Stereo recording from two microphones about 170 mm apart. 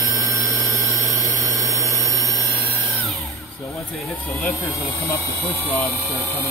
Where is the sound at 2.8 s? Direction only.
Centre (ahead or behind).